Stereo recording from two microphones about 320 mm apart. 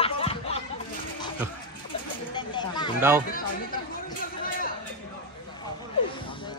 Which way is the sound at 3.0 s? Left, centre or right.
Centre.